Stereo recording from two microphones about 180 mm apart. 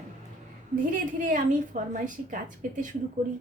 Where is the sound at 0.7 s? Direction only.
50° right (ahead or behind).